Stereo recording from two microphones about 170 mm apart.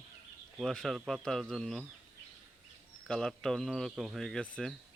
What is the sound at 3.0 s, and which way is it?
Speech, centre (ahead or behind).